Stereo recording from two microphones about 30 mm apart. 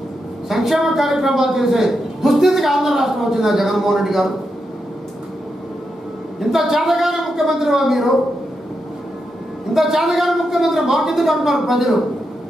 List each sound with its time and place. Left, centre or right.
0.5 s a man's voice: centre
6.5 s a man's voice: centre
9.8 s a man's voice: centre